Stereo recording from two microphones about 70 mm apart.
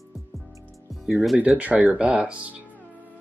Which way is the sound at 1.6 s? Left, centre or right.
Right.